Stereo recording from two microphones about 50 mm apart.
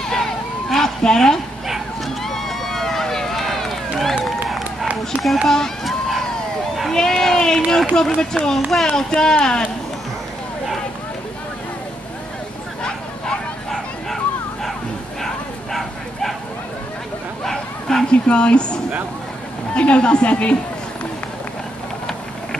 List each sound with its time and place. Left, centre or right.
0.1 s a sound: centre
2.2 s run: centre
5.2 s run: centre
6.9 s a sound: centre
7.9 s speech: centre
8.5 s a child's voice: centre
8.9 s speech: centre
13.7 s bow-wow: centre
17.5 s bow-wow: centre
18.0 s speech: centre